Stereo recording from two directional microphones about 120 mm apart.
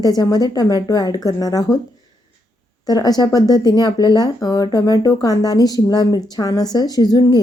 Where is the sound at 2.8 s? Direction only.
35° left (ahead or behind).